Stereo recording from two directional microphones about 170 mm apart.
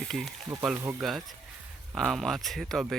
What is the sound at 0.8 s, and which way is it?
Speech, 15° right (ahead or behind).